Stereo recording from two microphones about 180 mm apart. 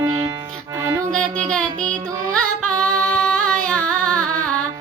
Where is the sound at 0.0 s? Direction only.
20° right (ahead or behind).